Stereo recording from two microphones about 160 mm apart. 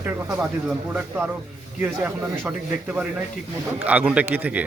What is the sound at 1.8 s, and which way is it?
Speech, 10° right (ahead or behind).